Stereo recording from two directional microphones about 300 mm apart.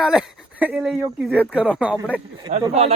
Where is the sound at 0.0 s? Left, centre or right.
Centre.